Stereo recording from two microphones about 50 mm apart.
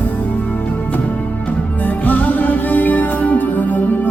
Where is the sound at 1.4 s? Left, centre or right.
Left.